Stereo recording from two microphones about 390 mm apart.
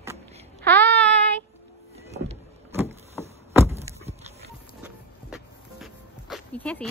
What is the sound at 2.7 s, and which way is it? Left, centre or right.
Vehicle, centre.